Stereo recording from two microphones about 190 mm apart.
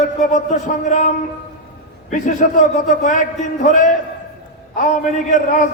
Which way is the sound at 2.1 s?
40° left (ahead or behind).